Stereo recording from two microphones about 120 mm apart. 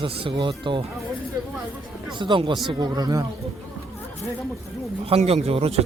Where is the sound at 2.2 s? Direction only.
40° right (ahead or behind).